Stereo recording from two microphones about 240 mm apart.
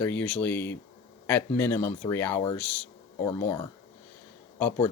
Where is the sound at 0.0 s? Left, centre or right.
Centre.